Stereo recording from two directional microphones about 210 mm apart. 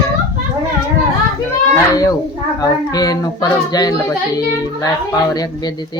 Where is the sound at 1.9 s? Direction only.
15° left (ahead or behind).